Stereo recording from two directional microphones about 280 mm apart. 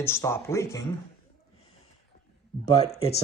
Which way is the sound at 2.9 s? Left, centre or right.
Centre.